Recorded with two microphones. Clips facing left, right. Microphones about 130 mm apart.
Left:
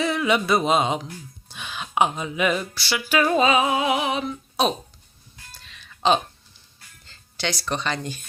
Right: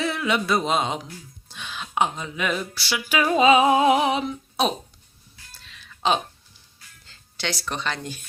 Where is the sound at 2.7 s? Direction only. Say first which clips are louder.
Left 2 dB; 10° right (ahead or behind).